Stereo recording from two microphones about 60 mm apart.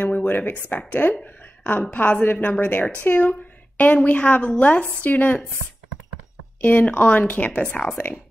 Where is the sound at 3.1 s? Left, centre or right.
Left.